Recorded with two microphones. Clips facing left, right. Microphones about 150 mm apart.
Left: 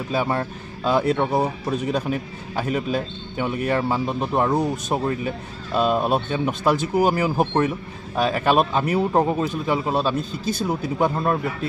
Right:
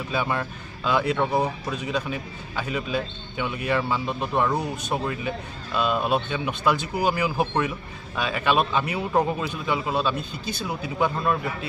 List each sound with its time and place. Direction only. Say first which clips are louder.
0.1 s speech: left 4 dB; 35° left (ahead or behind)